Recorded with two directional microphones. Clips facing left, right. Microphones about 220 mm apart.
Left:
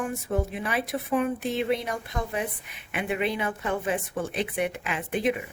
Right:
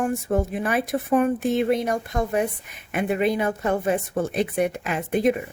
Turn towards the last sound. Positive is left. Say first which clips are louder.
# right 5 dB
turn(degrees=-40)  # may be behind; listen again after turning